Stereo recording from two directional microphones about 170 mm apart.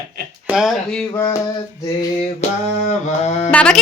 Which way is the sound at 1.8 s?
20° left (ahead or behind).